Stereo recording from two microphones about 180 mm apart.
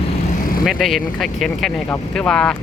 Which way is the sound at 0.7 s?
Centre (ahead or behind).